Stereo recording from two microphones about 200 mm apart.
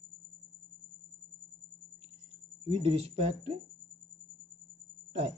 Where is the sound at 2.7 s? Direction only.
30° right (ahead or behind).